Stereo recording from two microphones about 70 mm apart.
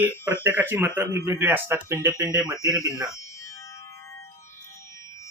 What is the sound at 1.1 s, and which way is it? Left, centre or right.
Speech, right.